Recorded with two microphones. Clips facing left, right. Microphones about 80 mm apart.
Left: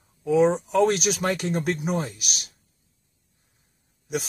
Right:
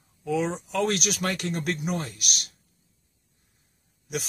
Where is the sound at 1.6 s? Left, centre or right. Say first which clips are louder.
Left 3 dB; centre.